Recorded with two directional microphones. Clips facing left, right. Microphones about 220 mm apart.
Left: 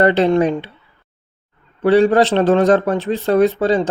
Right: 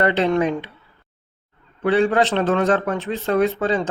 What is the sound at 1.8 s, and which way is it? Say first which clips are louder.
Speech: left 5 dB; 35° left (ahead or behind).